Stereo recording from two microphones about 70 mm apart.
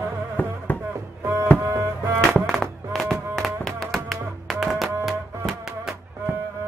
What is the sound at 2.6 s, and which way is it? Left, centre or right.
Music, centre.